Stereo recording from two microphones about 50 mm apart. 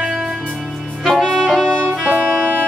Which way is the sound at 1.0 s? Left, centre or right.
Centre.